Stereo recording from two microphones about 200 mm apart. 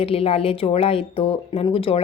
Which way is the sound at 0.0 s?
30° left (ahead or behind).